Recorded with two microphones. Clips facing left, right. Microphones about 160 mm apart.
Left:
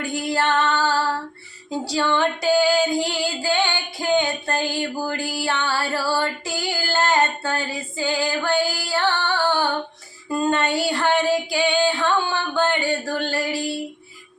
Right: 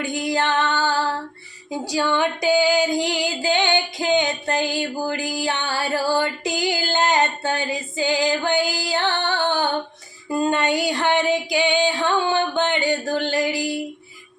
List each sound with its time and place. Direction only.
0.0 s female singing: 15° right (ahead or behind)